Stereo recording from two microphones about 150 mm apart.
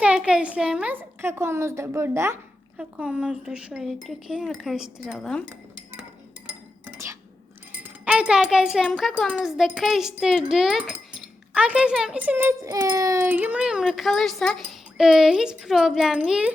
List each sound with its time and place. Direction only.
0.0 s a woman's voice: 5° right (ahead or behind)
6.8 s a sound: 20° right (ahead or behind)
7.7 s a child's voice: 10° right (ahead or behind)
13.2 s a woman's voice: 10° right (ahead or behind)